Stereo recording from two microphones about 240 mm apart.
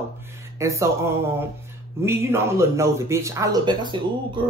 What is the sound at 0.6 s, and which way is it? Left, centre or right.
A man's voice, centre.